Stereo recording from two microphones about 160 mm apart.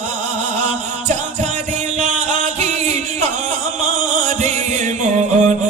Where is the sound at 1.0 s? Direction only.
50° right (ahead or behind).